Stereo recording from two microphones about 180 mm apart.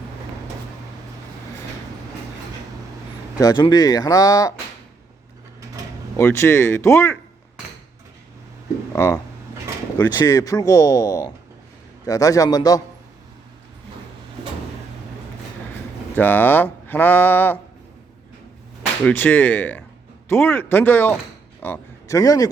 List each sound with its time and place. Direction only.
3.3 s speech: 20° left (ahead or behind)
6.1 s speech: 15° left (ahead or behind)
8.9 s speech: 15° left (ahead or behind)
16.1 s speech: 10° left (ahead or behind)
19.0 s speech: 10° left (ahead or behind)